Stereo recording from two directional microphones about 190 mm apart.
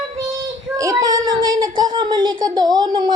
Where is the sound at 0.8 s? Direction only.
20° right (ahead or behind).